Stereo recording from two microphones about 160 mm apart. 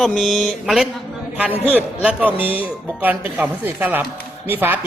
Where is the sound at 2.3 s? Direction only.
35° left (ahead or behind).